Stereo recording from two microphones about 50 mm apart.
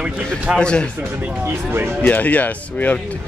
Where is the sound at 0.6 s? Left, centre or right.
Centre.